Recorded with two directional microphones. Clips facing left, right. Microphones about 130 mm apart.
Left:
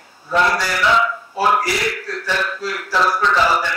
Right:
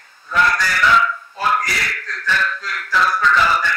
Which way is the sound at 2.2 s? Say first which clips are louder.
Right 2 dB; 20° left (ahead or behind).